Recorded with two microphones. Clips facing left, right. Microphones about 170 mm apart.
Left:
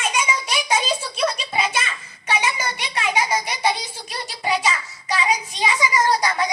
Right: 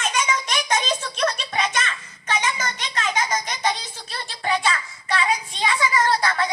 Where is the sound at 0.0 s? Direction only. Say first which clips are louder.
Even; 10° left (ahead or behind).